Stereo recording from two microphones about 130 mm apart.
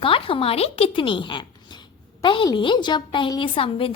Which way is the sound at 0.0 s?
45° left (ahead or behind).